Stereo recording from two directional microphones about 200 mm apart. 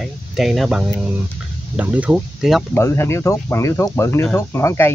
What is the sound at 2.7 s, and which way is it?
Speech, 10° left (ahead or behind).